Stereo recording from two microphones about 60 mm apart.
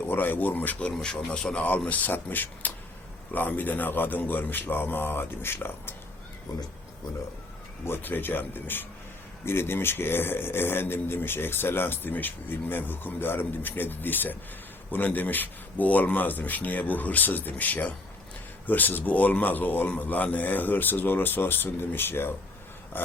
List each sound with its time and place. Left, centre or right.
0.0 s speech: left
0.9 s a man's voice: centre
1.9 s speech: left
7.9 s speech: left